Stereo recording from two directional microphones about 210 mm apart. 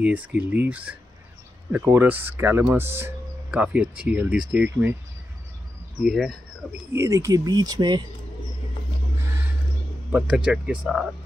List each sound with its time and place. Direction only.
0.0 s speech: 5° right (ahead or behind)
6.0 s speech: centre (ahead or behind)
6.9 s speech: 15° right (ahead or behind)
10.1 s speech: 5° right (ahead or behind)